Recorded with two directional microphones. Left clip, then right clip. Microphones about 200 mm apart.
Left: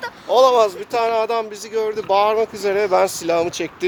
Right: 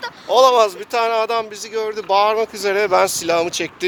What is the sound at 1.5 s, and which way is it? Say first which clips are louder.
Speech: left 1 dB; 10° left (ahead or behind).